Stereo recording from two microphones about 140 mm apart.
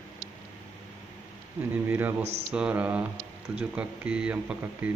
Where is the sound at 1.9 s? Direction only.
15° right (ahead or behind).